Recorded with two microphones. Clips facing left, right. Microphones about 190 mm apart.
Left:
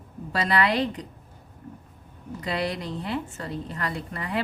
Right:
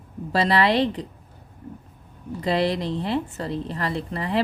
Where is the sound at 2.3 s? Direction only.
30° right (ahead or behind).